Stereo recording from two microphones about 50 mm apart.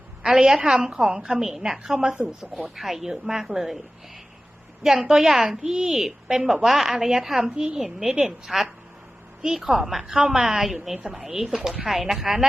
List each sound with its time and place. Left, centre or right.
0.2 s a woman's voice: centre
4.8 s a woman's voice: centre